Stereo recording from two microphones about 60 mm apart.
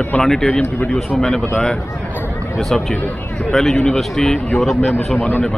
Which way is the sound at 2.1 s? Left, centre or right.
Left.